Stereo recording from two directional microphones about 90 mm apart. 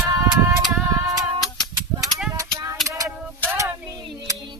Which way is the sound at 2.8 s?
40° right (ahead or behind).